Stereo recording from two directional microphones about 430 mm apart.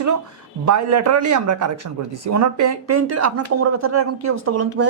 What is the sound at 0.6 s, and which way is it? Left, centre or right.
Speech, right.